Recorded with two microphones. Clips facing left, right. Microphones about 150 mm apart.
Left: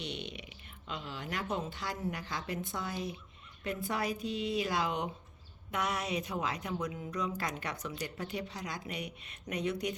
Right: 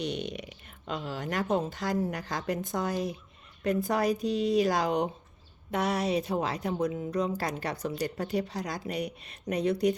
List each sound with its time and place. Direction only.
0.0 s a woman's voice: 45° right (ahead or behind)